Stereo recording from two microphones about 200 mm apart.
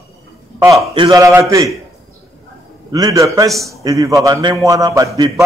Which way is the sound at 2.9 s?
20° right (ahead or behind).